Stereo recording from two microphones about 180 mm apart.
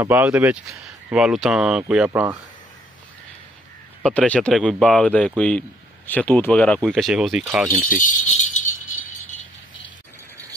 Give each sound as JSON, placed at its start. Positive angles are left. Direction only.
{"t": 0.0, "sound": "speech", "side_deg": -10}
{"t": 4.0, "sound": "speech", "side_deg": 5}
{"t": 7.9, "sound": "keys jangling", "side_deg": 45}